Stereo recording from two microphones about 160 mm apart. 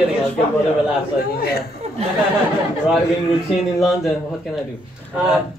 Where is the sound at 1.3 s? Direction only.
75° left (ahead or behind).